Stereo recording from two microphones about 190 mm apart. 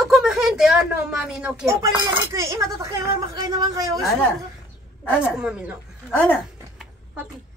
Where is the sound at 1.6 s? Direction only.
15° right (ahead or behind).